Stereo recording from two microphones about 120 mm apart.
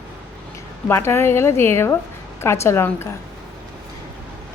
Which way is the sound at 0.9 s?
20° left (ahead or behind).